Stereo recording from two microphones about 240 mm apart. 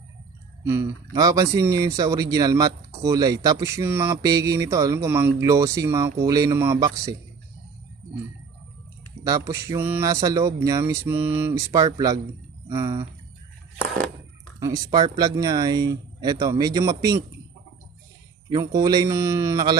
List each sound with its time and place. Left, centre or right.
0.6 s speech: centre
9.2 s speech: centre
14.6 s speech: centre
18.5 s speech: centre